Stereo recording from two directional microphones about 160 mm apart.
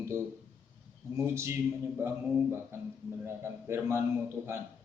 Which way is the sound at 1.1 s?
15° right (ahead or behind).